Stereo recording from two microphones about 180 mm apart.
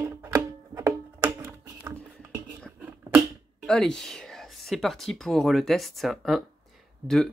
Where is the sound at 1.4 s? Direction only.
15° right (ahead or behind).